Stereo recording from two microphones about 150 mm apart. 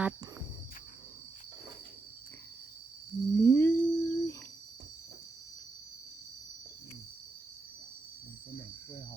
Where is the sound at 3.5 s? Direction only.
15° left (ahead or behind).